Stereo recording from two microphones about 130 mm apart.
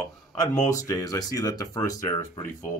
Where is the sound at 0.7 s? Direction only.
25° left (ahead or behind).